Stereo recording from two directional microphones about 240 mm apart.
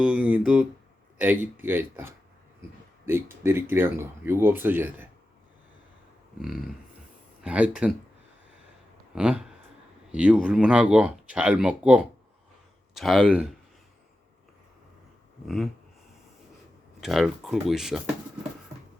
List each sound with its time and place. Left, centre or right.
0.0 s speech: centre
7.4 s speech: centre
9.1 s speech: centre
15.4 s speech: centre
17.0 s speech: centre